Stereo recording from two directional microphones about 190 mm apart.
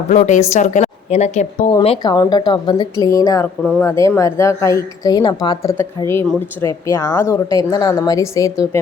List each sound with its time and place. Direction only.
0.1 s a woman's voice: 40° left (ahead or behind)
1.8 s speech: 25° left (ahead or behind)